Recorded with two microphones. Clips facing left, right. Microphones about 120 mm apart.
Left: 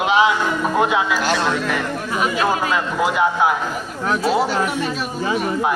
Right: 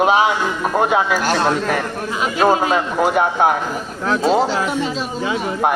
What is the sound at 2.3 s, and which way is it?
Speech, 25° right (ahead or behind).